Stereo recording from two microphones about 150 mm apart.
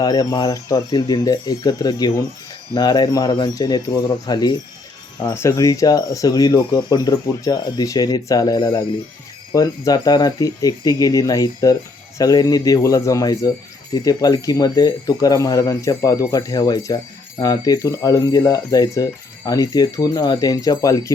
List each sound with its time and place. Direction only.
0.0 s speech: 25° left (ahead or behind)